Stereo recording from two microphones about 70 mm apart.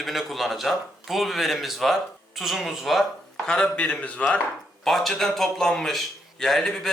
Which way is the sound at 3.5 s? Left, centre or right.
Centre.